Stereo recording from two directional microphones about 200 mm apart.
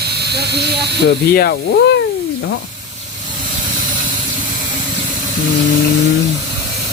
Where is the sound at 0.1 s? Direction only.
55° right (ahead or behind).